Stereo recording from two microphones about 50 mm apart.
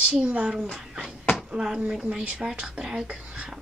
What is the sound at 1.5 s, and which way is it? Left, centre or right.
A woman's voice, centre.